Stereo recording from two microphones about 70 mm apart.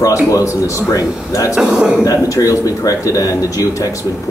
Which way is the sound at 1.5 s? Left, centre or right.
Centre.